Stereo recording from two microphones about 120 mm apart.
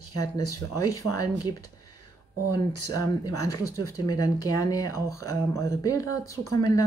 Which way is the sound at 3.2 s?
30° left (ahead or behind).